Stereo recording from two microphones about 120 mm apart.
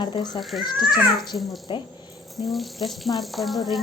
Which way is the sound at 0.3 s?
Centre (ahead or behind).